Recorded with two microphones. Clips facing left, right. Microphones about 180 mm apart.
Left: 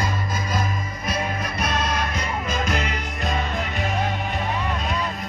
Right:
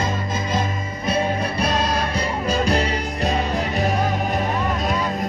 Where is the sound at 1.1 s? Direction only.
30° right (ahead or behind).